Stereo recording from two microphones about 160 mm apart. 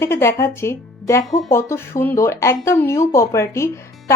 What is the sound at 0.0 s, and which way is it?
Speech, 15° left (ahead or behind).